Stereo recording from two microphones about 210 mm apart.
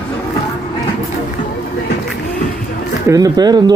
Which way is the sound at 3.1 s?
20° right (ahead or behind).